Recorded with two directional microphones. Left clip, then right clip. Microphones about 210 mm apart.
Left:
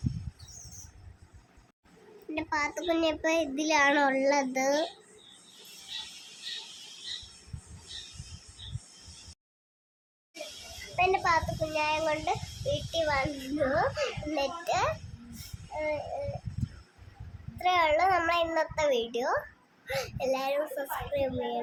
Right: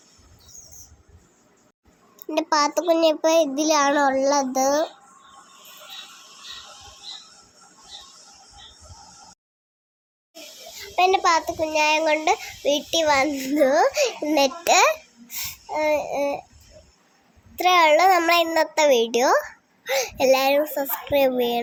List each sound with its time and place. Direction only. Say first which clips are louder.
2.3 s a child's voice: right 11 dB; 25° right (ahead or behind); by 4.9 s 10° right (ahead or behind)
10.9 s a child's voice: right 8 dB; 25° right (ahead or behind)
15.4 s babbling: right 11 dB; 30° right (ahead or behind)
17.6 s a child's voice: right 9 dB; 30° right (ahead or behind)